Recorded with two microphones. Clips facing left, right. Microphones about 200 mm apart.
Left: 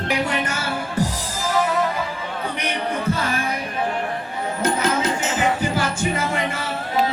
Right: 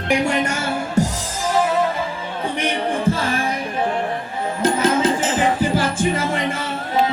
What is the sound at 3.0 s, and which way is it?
Music, 25° right (ahead or behind).